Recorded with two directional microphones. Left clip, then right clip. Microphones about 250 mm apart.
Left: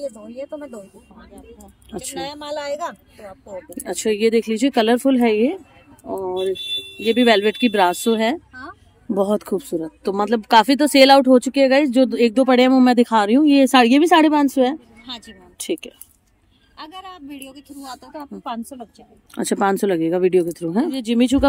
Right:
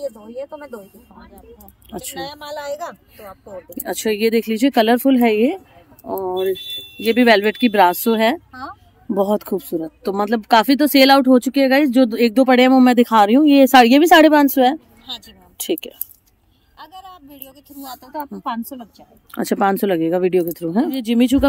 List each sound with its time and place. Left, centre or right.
0.0 s speech: centre
2.1 s speech: centre
3.7 s speech: centre
15.0 s a woman's voice: right
15.5 s speech: centre
16.7 s speech: right; by 21.5 s centre